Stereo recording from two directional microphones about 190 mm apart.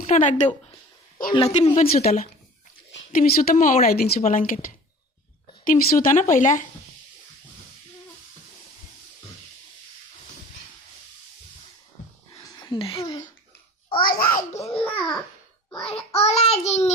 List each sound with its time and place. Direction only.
0.1 s child singing: 40° left (ahead or behind)
3.1 s speech: 45° left (ahead or behind)
12.3 s a sound: 20° left (ahead or behind)
14.0 s speech: 50° left (ahead or behind)
14.8 s a child's voice: 5° left (ahead or behind)
16.1 s child singing: 35° left (ahead or behind)